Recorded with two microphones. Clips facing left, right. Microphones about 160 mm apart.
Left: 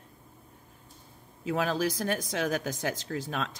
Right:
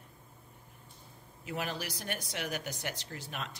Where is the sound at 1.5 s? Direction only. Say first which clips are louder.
Left 9 dB; 90° left.